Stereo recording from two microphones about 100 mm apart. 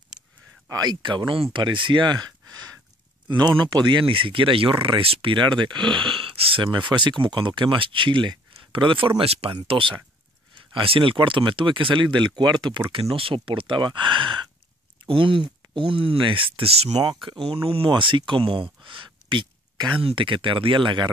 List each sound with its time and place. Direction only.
0.7 s speech: 45° right (ahead or behind); by 9.6 s 80° right
9.7 s speech: 60° right (ahead or behind)
12.9 s speech: 65° right (ahead or behind); by 17.0 s 80° right
17.0 s speech: 45° right (ahead or behind)
17.5 s speech: 65° right (ahead or behind)